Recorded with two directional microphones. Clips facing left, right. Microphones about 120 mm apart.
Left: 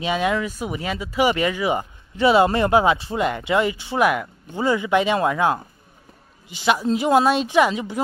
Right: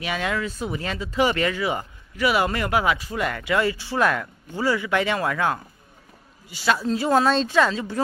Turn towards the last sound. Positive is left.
turn(degrees=15)  # may be behind; listen again after turning